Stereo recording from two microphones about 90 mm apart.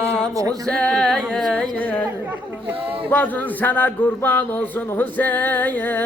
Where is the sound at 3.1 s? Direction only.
20° left (ahead or behind).